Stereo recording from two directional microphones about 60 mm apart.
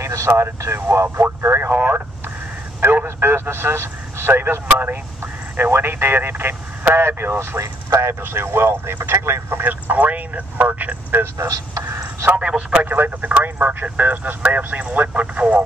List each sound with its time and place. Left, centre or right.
0.0 s vehicle: right
0.3 s a man's voice: right
9.6 s speech: right
11.3 s speech: right
11.9 s a sound: right
12.4 s speech: centre
12.8 s speech: right